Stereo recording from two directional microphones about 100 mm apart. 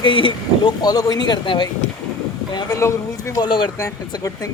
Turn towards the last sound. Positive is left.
turn(degrees=55)  # may be behind; listen again after turning